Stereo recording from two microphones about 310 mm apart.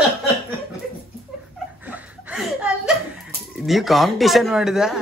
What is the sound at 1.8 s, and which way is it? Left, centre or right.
Chuckle, centre.